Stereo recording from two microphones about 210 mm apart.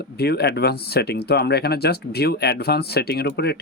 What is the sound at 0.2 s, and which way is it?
Speech, 50° left (ahead or behind).